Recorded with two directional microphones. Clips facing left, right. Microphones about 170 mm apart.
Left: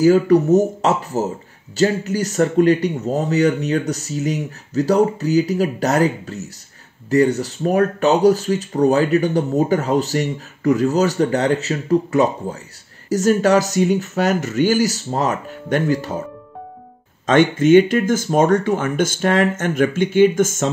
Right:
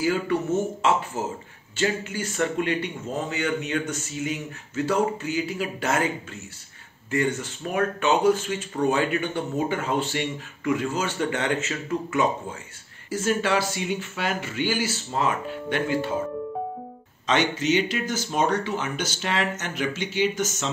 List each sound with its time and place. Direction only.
0.0 s speech: 40° left (ahead or behind)
17.3 s speech: 50° left (ahead or behind)